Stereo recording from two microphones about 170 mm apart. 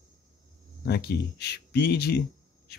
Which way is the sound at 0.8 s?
70° left (ahead or behind).